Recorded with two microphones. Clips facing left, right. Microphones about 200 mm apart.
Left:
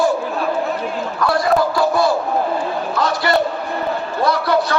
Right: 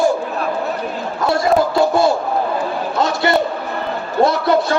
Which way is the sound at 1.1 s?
25° right (ahead or behind).